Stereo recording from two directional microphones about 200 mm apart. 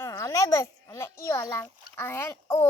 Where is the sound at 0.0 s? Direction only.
15° left (ahead or behind).